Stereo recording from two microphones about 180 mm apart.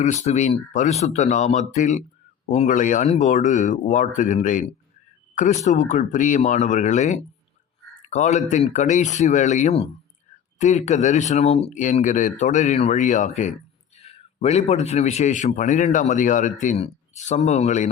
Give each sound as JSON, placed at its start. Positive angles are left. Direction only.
{"t": 0.0, "sound": "a man's voice", "side_deg": 40}